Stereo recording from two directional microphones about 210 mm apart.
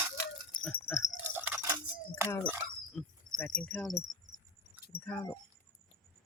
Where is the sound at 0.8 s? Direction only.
15° left (ahead or behind).